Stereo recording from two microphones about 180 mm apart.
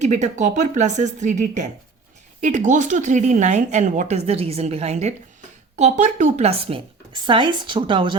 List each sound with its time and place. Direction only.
0.0 s a woman's voice: 40° right (ahead or behind)